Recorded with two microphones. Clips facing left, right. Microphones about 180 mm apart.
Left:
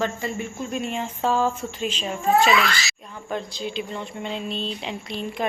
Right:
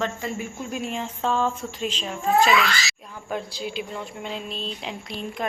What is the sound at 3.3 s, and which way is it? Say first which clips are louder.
Speech: left 1 dB; 5° right (ahead or behind).